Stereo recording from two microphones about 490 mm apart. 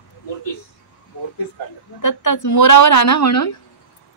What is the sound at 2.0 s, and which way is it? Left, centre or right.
A woman's voice, left.